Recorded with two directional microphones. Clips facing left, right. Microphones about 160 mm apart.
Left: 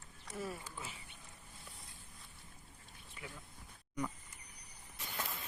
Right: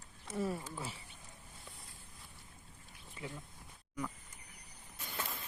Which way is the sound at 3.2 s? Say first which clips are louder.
Right 5 dB; 30° right (ahead or behind).